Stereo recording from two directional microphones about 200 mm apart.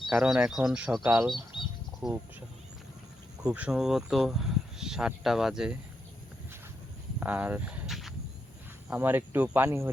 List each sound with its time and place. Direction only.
0.1 s speech: 5° right (ahead or behind)
1.5 s bird: 25° left (ahead or behind)
3.4 s speech: 5° right (ahead or behind)
7.2 s a sound: 10° right (ahead or behind)
8.9 s speech: 10° right (ahead or behind)